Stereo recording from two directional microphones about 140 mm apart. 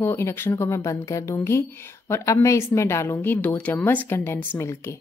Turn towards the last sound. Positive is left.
turn(degrees=20)  # may be behind; listen again after turning